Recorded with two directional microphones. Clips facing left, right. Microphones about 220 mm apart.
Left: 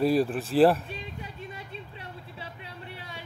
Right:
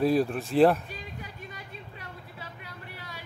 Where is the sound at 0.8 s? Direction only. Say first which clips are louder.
Left 2 dB; 25° left (ahead or behind).